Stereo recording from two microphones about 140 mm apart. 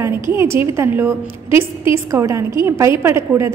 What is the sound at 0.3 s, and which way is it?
A woman's voice, 15° right (ahead or behind).